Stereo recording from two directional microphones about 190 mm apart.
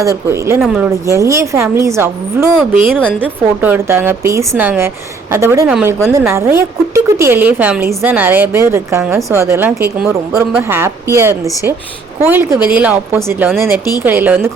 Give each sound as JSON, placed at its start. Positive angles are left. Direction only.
{"t": 0.0, "sound": "a woman's voice", "side_deg": -15}
{"t": 0.9, "sound": "a woman's voice", "side_deg": -15}
{"t": 2.6, "sound": "a woman's voice", "side_deg": -5}